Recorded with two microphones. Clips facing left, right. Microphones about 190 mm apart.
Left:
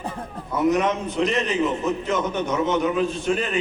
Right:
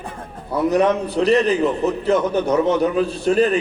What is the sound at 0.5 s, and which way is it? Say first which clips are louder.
A man's voice: right 4 dB; 35° right (ahead or behind).